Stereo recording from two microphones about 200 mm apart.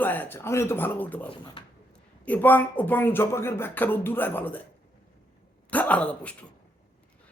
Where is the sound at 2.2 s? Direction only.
10° left (ahead or behind).